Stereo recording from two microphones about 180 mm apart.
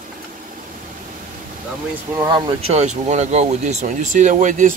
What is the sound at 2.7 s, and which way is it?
Speech, 40° right (ahead or behind).